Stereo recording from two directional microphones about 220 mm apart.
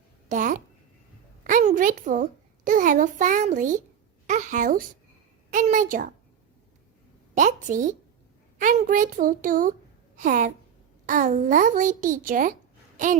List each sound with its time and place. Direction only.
0.3 s a child's voice: 35° right (ahead or behind)
1.5 s a sound: 35° right (ahead or behind)
2.6 s a child's voice: 35° right (ahead or behind)
4.3 s a sound: 35° right (ahead or behind)
5.5 s a child's voice: 35° right (ahead or behind)
7.3 s a child's voice: 35° right (ahead or behind)